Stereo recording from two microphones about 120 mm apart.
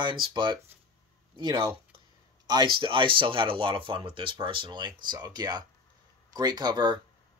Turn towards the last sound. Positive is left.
turn(degrees=-35)  # may be behind; listen again after turning